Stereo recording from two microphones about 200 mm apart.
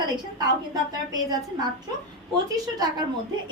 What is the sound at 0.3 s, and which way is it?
A woman's voice, 20° right (ahead or behind).